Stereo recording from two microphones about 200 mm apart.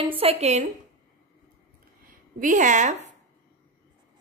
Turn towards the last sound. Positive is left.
turn(degrees=-35)  # may be behind; listen again after turning